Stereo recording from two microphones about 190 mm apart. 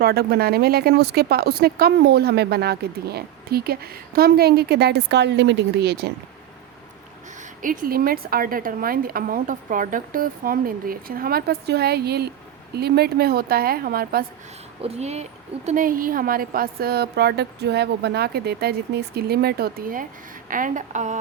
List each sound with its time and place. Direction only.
0.0 s speech: 55° right (ahead or behind)
7.6 s a woman's voice: 45° right (ahead or behind)
14.8 s a woman's voice: 35° right (ahead or behind)